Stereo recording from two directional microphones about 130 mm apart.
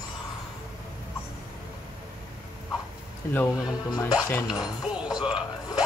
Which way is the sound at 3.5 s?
30° left (ahead or behind).